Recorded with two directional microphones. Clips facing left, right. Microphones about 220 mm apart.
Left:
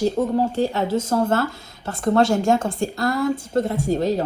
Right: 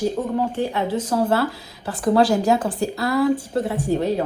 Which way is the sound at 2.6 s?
35° right (ahead or behind).